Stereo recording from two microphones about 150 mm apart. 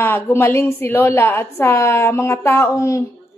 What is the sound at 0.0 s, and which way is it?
A woman's voice, 15° left (ahead or behind).